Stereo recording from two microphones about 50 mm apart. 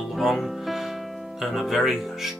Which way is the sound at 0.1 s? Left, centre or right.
Centre.